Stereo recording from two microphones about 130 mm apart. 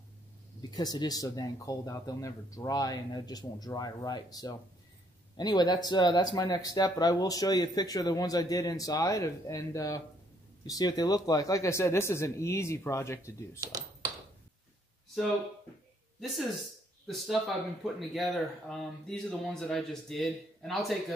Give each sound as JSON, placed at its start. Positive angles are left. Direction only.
{"t": 0.6, "sound": "speech", "side_deg": 30}
{"t": 13.6, "sound": "speech", "side_deg": -30}
{"t": 16.2, "sound": "speech", "side_deg": 0}
{"t": 17.8, "sound": "speech", "side_deg": 0}